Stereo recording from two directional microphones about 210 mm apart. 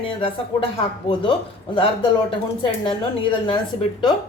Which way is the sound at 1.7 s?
25° left (ahead or behind).